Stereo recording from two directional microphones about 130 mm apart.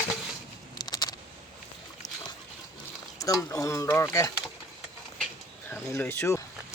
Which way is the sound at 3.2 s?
25° left (ahead or behind).